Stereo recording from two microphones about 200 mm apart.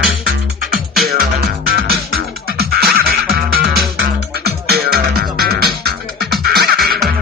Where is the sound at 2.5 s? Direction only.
50° right (ahead or behind).